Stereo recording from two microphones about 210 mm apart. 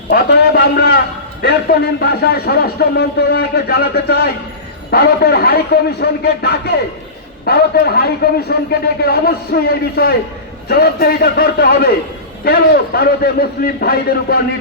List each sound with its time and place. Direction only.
0.1 s a man's voice: 50° left (ahead or behind)